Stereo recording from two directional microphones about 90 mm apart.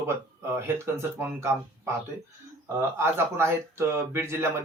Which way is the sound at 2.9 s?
25° right (ahead or behind).